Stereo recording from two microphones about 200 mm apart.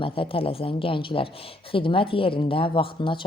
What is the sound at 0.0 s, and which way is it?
A woman's voice, 25° left (ahead or behind).